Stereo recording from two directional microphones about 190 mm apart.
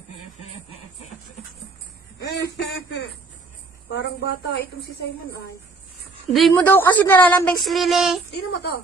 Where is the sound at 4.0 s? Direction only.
75° left (ahead or behind).